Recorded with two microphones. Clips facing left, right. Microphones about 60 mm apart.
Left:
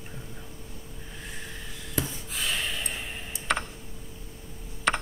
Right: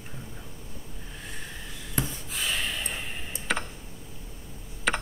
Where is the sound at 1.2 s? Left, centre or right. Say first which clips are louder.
Even; centre.